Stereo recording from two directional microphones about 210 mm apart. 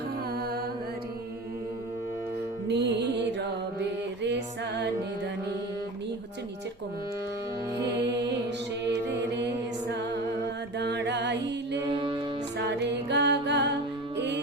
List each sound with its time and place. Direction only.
2.6 s music: 55° right (ahead or behind)
8.9 s mantra: 55° right (ahead or behind)
10.8 s music: 55° right (ahead or behind)
11.9 s music: 25° right (ahead or behind)
12.5 s music: 55° right (ahead or behind)